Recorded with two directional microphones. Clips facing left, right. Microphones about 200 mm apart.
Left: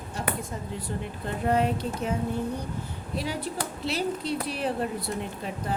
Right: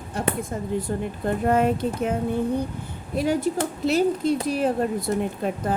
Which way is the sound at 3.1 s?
50° right (ahead or behind).